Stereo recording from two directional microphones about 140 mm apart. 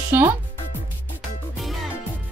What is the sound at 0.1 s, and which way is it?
Speech, 20° right (ahead or behind).